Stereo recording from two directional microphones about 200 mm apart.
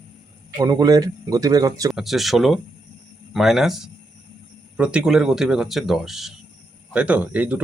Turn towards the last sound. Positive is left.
turn(degrees=-5)  # may be behind; listen again after turning